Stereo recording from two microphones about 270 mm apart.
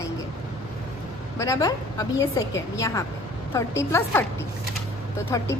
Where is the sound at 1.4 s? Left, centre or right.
Centre.